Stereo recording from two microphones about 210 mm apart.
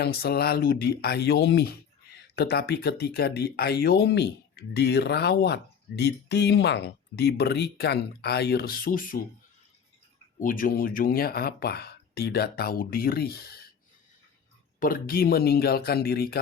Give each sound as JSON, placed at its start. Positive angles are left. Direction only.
{"t": 0.0, "sound": "speech", "side_deg": 50}
{"t": 10.4, "sound": "speech", "side_deg": 40}
{"t": 14.8, "sound": "speech", "side_deg": 45}